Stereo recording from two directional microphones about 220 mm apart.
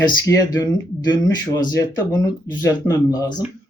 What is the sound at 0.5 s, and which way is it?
Speech, 15° left (ahead or behind).